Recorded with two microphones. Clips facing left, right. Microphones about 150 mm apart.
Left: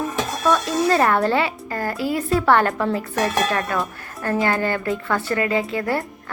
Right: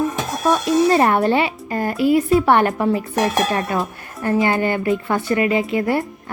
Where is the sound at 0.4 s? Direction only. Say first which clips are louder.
Right 4 dB; 15° right (ahead or behind).